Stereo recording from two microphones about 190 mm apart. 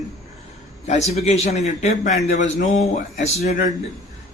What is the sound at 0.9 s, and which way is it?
Speech, 35° left (ahead or behind).